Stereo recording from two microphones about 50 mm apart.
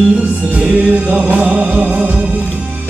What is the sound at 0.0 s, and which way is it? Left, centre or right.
Music, centre.